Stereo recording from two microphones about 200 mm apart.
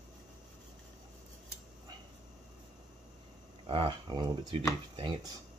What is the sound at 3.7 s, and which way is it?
Speech, 25° right (ahead or behind).